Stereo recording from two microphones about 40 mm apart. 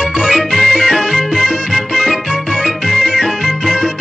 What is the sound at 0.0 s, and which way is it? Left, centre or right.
Music, centre.